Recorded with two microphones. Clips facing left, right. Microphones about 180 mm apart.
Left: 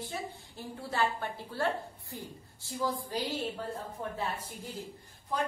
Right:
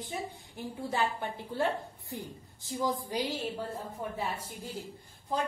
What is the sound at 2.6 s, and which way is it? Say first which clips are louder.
Speech: right 2 dB; 15° right (ahead or behind).